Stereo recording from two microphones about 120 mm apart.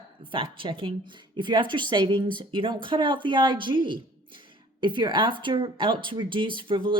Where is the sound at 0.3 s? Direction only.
45° right (ahead or behind).